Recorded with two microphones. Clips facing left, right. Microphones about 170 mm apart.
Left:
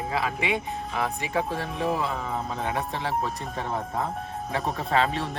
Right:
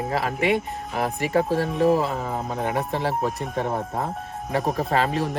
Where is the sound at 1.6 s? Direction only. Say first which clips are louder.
Right 8 dB; centre (ahead or behind).